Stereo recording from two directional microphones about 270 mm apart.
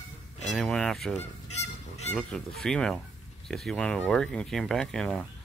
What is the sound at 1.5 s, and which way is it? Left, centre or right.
Goose, left.